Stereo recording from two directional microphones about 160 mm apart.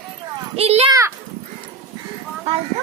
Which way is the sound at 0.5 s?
40° right (ahead or behind).